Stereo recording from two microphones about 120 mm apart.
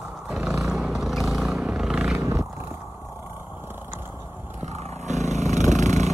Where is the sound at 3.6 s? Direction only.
15° right (ahead or behind).